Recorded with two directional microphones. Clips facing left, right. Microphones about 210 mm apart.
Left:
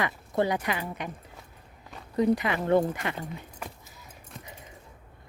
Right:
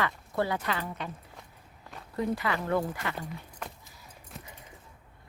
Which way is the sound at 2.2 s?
20° left (ahead or behind).